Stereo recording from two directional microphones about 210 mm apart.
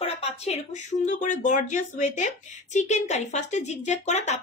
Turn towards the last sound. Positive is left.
turn(degrees=35)  # may be behind; listen again after turning